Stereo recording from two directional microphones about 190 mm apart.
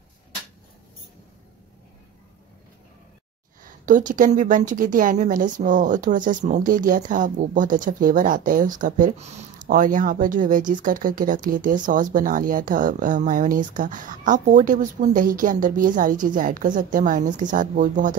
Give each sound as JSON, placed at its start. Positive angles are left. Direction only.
{"t": 3.6, "sound": "a woman's voice", "side_deg": -45}